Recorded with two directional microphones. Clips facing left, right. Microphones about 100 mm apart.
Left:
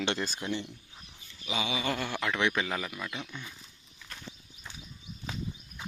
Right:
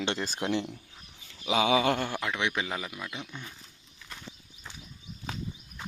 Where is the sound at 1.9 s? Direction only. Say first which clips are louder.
Right 3 dB; 50° right (ahead or behind).